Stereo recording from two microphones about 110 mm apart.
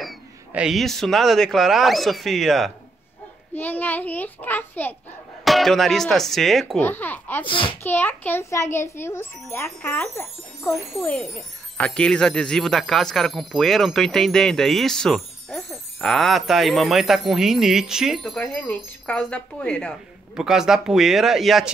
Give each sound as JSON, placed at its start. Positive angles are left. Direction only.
{"t": 0.5, "sound": "speech", "side_deg": -5}
{"t": 3.5, "sound": "a child's voice", "side_deg": 15}
{"t": 5.4, "sound": "speech", "side_deg": 0}
{"t": 6.8, "sound": "a child's voice", "side_deg": 15}
{"t": 7.4, "sound": "a child's voice", "side_deg": 50}
{"t": 7.8, "sound": "a child's voice", "side_deg": 20}
{"t": 11.1, "sound": "speech", "side_deg": 0}
{"t": 20.3, "sound": "speech", "side_deg": -5}